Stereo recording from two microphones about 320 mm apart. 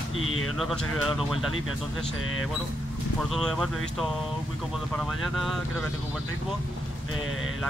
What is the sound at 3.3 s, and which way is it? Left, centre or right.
Speech, centre.